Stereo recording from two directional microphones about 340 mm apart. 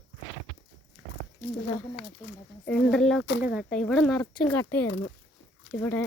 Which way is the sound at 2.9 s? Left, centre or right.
Centre.